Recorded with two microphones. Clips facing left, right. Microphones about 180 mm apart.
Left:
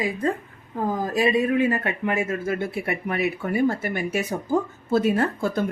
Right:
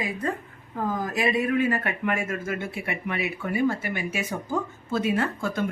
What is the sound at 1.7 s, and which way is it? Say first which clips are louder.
Speech: left 2 dB; 25° left (ahead or behind).